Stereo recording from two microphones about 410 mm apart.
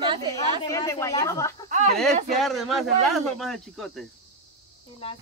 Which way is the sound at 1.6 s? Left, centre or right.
Centre.